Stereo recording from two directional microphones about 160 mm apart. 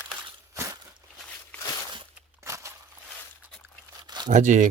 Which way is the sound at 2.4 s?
20° right (ahead or behind).